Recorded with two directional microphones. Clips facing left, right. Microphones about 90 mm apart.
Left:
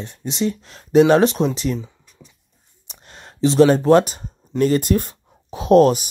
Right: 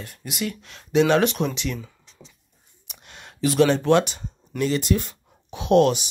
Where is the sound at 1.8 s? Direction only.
15° left (ahead or behind).